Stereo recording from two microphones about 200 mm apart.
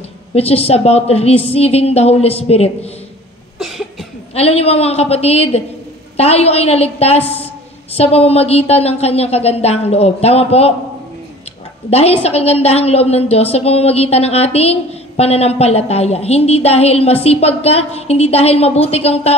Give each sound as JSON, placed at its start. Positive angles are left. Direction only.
{"t": 0.3, "sound": "a woman's voice", "side_deg": 30}
{"t": 3.5, "sound": "cough", "side_deg": 0}
{"t": 4.4, "sound": "a woman's voice", "side_deg": 30}
{"t": 11.9, "sound": "a woman's voice", "side_deg": 30}